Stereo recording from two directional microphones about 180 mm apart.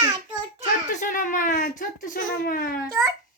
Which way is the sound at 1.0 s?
45° left (ahead or behind).